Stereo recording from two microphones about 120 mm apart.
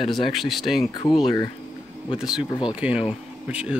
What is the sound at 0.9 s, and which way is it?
Speech, 35° left (ahead or behind).